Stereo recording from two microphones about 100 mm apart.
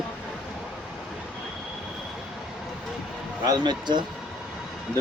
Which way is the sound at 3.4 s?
45° right (ahead or behind).